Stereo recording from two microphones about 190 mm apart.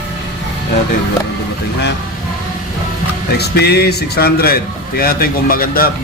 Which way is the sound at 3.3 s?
60° left (ahead or behind).